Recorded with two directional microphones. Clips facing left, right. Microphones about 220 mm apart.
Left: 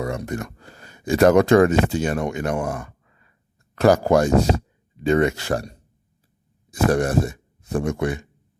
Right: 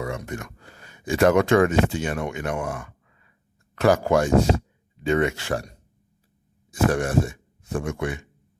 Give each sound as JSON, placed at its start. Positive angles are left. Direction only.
{"t": 0.0, "sound": "speech", "side_deg": 40}